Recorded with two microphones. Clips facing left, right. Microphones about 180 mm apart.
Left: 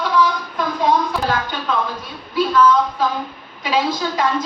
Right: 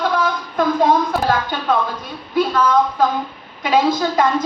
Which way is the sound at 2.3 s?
55° right (ahead or behind).